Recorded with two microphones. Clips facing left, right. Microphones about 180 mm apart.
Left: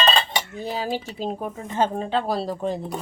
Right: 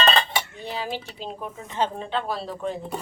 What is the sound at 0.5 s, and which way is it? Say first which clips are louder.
Speech: left 4 dB; 40° left (ahead or behind).